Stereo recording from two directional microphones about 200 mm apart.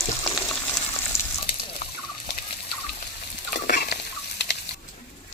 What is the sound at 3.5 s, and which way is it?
Fowl, 50° left (ahead or behind).